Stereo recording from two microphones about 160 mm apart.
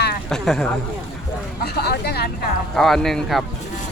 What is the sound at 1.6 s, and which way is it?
Speech, 85° left.